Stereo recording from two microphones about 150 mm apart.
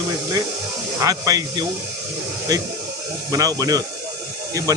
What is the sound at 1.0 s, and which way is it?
Speech, 25° right (ahead or behind).